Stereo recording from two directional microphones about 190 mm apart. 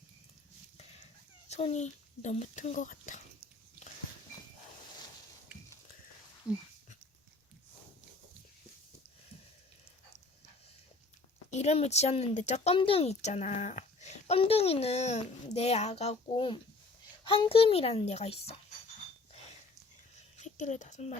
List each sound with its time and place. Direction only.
1.5 s speech: 35° left (ahead or behind)
6.5 s speech: 5° right (ahead or behind)
11.5 s speech: 35° left (ahead or behind)
20.1 s a sound: 35° left (ahead or behind)